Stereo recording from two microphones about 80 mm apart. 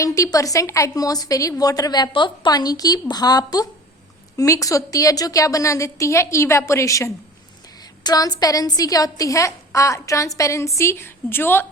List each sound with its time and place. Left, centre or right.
0.0 s a woman's voice: left
2.5 s a woman's voice: left
4.4 s a woman's voice: left
8.0 s a woman's voice: left